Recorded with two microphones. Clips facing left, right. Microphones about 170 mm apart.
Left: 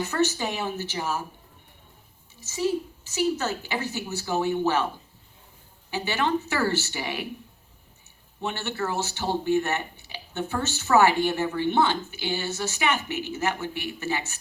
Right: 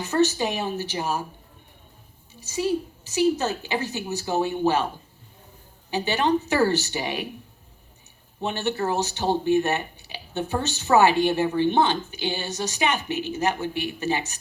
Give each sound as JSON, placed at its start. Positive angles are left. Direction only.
{"t": 0.0, "sound": "speech", "side_deg": -20}
{"t": 3.1, "sound": "speech", "side_deg": -15}
{"t": 5.9, "sound": "speech", "side_deg": -20}
{"t": 8.4, "sound": "speech", "side_deg": -20}